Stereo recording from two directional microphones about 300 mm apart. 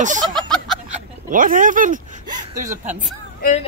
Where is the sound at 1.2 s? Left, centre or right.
Right.